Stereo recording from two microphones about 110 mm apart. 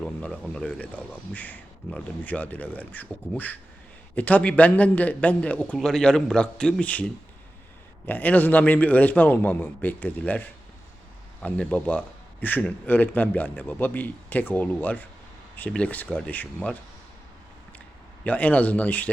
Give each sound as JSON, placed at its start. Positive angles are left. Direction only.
{"t": 0.0, "sound": "speech", "side_deg": 10}
{"t": 18.2, "sound": "speech", "side_deg": 15}